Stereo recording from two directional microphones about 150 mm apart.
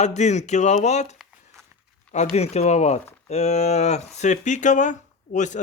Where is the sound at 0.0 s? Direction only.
50° left (ahead or behind).